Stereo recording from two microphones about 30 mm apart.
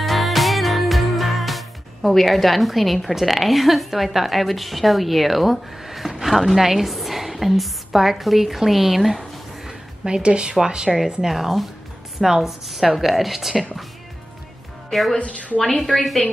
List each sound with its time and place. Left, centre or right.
0.0 s music: centre
6.2 s a woman's voice: centre
10.0 s a woman's voice: right
10.9 s a woman's voice: centre
14.9 s a woman's voice: centre
15.1 s a woman's voice: left